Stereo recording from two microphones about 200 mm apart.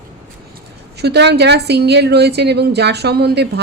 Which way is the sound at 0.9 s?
55° right (ahead or behind).